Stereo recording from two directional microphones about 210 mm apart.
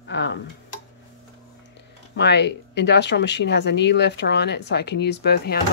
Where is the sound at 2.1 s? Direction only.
55° left (ahead or behind).